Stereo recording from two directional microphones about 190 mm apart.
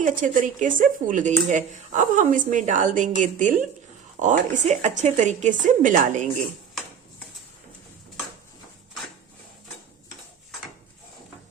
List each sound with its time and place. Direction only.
0.0 s speech: 45° right (ahead or behind)